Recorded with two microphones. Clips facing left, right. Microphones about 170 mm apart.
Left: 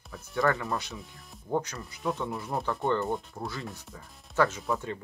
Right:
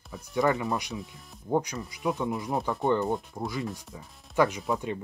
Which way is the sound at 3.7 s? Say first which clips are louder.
Right 3 dB; 15° right (ahead or behind).